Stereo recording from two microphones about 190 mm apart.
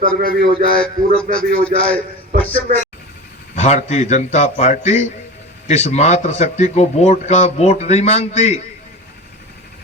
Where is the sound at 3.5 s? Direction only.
35° left (ahead or behind).